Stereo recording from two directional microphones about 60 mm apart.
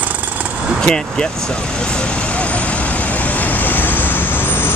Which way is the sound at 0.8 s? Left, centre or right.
Centre.